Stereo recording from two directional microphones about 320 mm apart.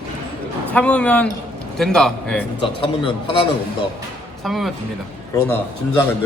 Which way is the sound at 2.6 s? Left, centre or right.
Centre.